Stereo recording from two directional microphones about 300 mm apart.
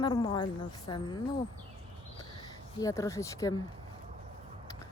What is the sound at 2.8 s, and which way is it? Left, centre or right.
Speech, centre.